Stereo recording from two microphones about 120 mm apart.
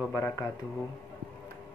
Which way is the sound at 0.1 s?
20° left (ahead or behind).